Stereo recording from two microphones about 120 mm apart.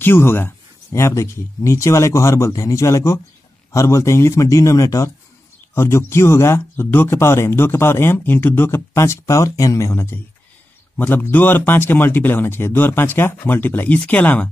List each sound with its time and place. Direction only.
0.0 s speech: 20° left (ahead or behind)